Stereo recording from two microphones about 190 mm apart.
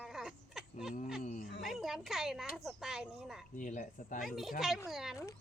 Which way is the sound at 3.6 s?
45° left (ahead or behind).